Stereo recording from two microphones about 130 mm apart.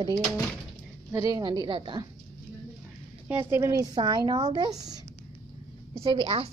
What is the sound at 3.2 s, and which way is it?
A woman's voice, 20° right (ahead or behind).